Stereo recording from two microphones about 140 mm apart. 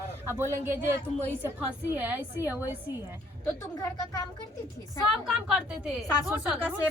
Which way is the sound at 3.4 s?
25° left (ahead or behind).